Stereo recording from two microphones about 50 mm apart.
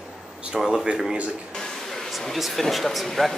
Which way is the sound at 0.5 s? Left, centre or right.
Centre.